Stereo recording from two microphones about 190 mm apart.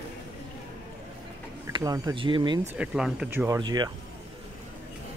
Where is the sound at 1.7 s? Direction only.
20° right (ahead or behind).